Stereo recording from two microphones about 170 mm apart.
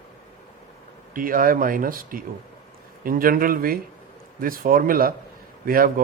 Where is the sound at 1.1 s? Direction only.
55° right (ahead or behind).